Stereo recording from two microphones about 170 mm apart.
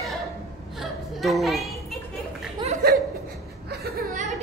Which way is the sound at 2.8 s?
65° right (ahead or behind).